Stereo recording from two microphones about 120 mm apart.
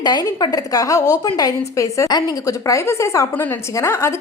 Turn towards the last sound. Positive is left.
turn(degrees=20)  # may be behind; listen again after turning